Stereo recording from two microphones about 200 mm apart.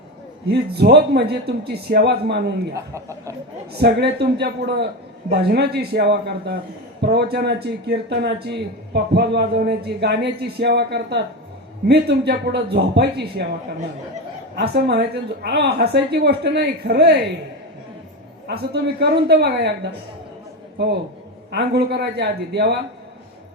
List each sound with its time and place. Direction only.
0.4 s speech: 55° right (ahead or behind)
2.7 s a man's voice: 15° right (ahead or behind)
3.7 s speech: 55° right (ahead or behind)
14.5 s speech: 55° right (ahead or behind)
18.4 s speech: 55° right (ahead or behind)
21.5 s speech: 55° right (ahead or behind)